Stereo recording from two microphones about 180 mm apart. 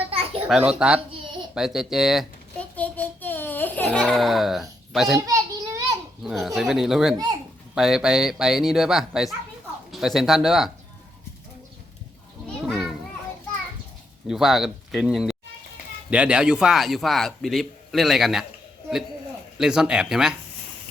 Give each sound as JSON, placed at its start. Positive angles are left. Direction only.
{"t": 0.1, "sound": "a sound", "side_deg": -30}
{"t": 0.4, "sound": "a man's voice", "side_deg": -5}
{"t": 1.1, "sound": "a sound", "side_deg": -30}
{"t": 1.5, "sound": "speech", "side_deg": -5}
{"t": 2.7, "sound": "baby cry", "side_deg": 10}
{"t": 4.9, "sound": "a child's voice", "side_deg": 0}
{"t": 5.2, "sound": "a sound", "side_deg": -15}
{"t": 6.2, "sound": "a man's voice", "side_deg": 0}
{"t": 12.6, "sound": "children playing", "side_deg": 0}
{"t": 14.3, "sound": "a man's voice", "side_deg": 0}
{"t": 19.5, "sound": "a man's voice", "side_deg": -5}